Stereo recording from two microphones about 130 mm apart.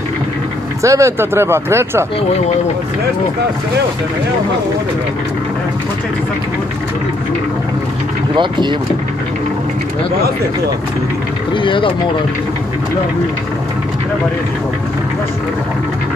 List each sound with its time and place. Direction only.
0.8 s speech: 25° right (ahead or behind)
8.4 s speech: 35° right (ahead or behind)
11.5 s speech: 40° left (ahead or behind)